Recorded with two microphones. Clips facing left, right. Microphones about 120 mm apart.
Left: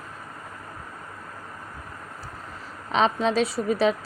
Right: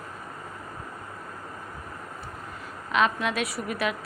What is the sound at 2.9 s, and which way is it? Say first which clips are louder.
Speech: left 3 dB; 30° left (ahead or behind).